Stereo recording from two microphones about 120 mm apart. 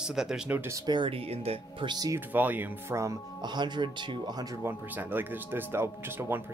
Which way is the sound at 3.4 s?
40° right (ahead or behind).